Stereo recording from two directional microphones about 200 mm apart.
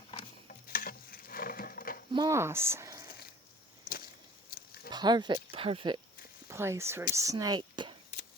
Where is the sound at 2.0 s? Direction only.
20° right (ahead or behind).